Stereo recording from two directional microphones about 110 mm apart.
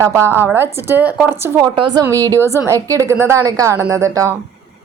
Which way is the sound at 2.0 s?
30° right (ahead or behind).